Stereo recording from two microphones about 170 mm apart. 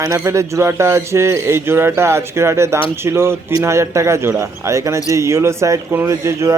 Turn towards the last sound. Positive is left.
turn(degrees=-15)  # may be behind; listen again after turning